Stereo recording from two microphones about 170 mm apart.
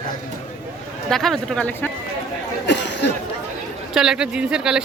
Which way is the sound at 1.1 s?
Centre (ahead or behind).